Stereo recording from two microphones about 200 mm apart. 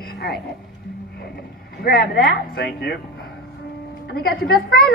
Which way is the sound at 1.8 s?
50° left (ahead or behind).